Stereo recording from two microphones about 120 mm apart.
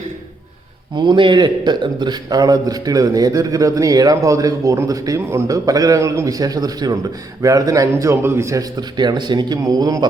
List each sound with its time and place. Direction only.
0.9 s a man's voice: 40° right (ahead or behind)